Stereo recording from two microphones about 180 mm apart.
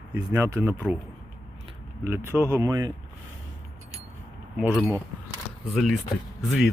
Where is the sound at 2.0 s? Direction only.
15° right (ahead or behind).